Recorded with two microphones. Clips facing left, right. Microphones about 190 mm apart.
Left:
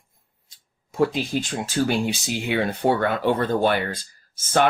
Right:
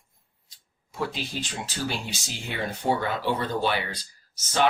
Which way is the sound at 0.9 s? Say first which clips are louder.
Left 9 dB; 50° left (ahead or behind).